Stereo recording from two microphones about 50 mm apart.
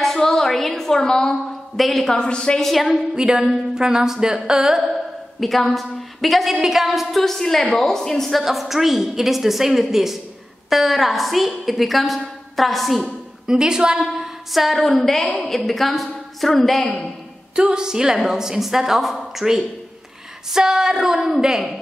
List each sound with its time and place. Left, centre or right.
0.0 s a sound: centre
1.3 s a woman's voice: centre
2.1 s a woman's voice: centre
2.6 s a woman's voice: centre
3.2 s a woman's voice: centre
13.5 s a woman's voice: centre
14.5 s a woman's voice: centre
17.6 s a woman's voice: centre